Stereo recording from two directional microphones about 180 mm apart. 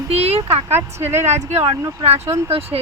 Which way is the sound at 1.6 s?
35° right (ahead or behind).